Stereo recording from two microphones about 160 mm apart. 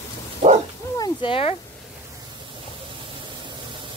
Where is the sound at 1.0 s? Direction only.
30° left (ahead or behind).